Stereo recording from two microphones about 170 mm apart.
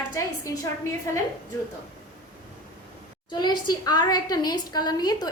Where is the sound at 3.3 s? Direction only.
25° left (ahead or behind).